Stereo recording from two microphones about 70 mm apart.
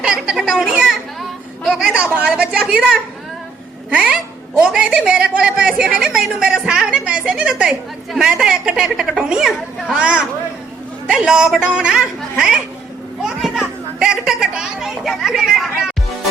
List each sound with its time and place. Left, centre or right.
0.0 s a sound: centre
1.6 s speech: centre
2.0 s a woman's voice: centre
13.2 s children playing: centre